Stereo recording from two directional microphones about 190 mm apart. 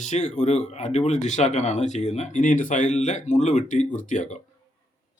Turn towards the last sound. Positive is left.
turn(degrees=40)  # may be behind; listen again after turning